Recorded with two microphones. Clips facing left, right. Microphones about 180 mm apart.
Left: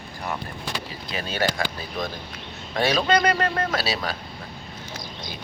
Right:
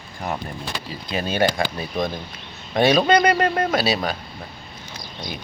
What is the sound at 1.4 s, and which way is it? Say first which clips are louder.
Speech: right 4 dB; 20° right (ahead or behind).